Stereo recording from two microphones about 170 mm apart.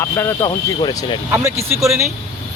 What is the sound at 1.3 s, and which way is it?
Speech, 15° right (ahead or behind).